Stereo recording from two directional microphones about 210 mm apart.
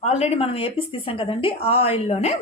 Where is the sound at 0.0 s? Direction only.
30° left (ahead or behind).